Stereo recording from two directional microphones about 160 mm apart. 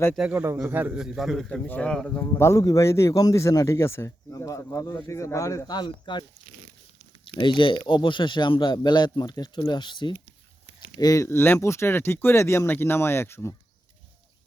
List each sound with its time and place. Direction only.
0.2 s a man's voice: 10° right (ahead or behind)
2.4 s speech: 20° left (ahead or behind)
7.3 s speech: 30° left (ahead or behind)